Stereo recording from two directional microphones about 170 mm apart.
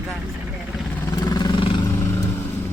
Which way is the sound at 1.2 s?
25° left (ahead or behind).